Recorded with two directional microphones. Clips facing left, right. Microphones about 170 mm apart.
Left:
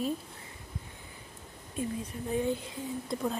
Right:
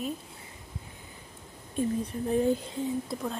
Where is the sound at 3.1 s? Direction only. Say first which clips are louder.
Left 1 dB; centre (ahead or behind).